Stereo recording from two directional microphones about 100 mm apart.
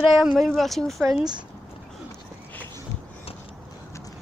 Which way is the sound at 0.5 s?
Centre (ahead or behind).